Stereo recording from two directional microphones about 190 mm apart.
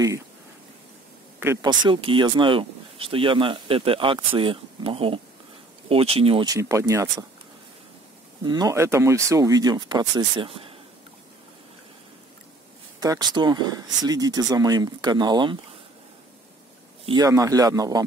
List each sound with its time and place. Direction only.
1.4 s speech: 15° right (ahead or behind)
8.5 s speech: 20° right (ahead or behind)
13.0 s speech: 20° right (ahead or behind)
17.0 s speech: 20° right (ahead or behind)